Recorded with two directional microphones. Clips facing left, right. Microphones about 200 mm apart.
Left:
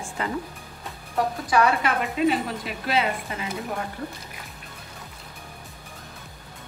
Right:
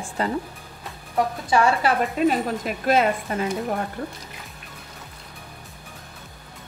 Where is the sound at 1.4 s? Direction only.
30° right (ahead or behind).